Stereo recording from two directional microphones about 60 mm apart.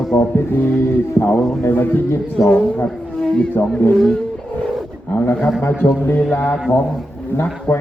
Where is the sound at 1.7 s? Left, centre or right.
Left.